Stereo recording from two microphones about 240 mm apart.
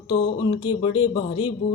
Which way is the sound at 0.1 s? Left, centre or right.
Centre.